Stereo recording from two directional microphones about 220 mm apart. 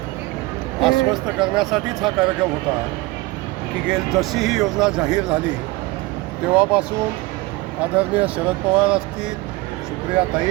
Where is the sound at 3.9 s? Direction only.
Centre (ahead or behind).